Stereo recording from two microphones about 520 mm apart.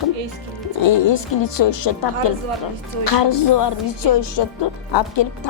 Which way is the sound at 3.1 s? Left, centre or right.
Left.